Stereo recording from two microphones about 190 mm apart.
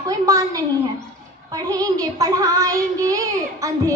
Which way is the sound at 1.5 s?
20° right (ahead or behind).